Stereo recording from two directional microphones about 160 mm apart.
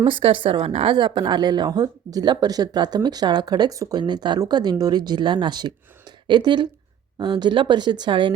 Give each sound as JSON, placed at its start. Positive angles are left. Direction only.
{"t": 0.0, "sound": "a woman's voice", "side_deg": -35}